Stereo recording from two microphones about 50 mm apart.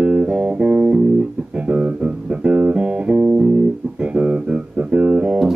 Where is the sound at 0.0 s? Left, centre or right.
Centre.